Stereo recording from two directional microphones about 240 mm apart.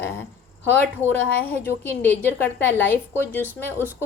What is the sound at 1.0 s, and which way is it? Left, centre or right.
A woman's voice, centre.